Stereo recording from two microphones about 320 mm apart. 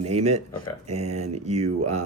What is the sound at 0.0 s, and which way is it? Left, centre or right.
Speech, centre.